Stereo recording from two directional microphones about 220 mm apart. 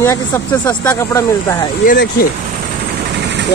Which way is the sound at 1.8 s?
40° left (ahead or behind).